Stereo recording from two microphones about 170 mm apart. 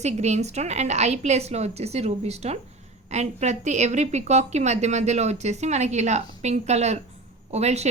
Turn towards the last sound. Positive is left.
turn(degrees=-40)  # may be behind; listen again after turning